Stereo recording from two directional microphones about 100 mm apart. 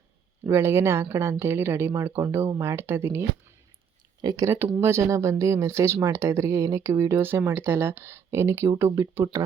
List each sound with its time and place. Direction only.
0.4 s speech: 25° right (ahead or behind)
4.2 s speech: 45° right (ahead or behind)
4.4 s speech: 20° right (ahead or behind)